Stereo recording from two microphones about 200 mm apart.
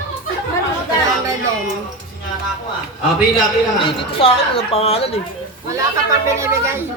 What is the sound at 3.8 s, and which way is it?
A woman's voice, 30° left (ahead or behind).